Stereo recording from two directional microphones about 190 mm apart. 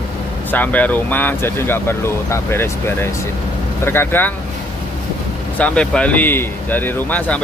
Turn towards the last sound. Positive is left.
turn(degrees=10)  # may be behind; listen again after turning